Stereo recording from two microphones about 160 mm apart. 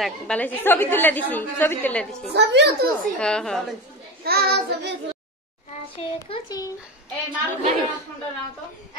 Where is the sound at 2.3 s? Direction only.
90° right.